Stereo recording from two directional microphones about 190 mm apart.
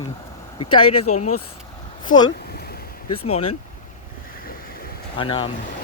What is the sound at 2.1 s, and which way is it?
Speech, 45° left (ahead or behind).